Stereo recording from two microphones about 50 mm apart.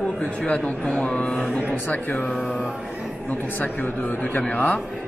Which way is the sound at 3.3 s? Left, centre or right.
Left.